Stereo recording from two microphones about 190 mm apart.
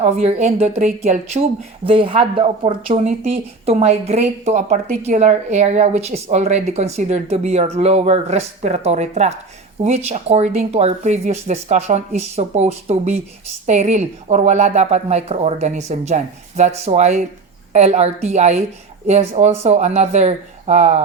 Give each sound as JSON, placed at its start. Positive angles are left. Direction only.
{"t": 0.0, "sound": "speech", "side_deg": -35}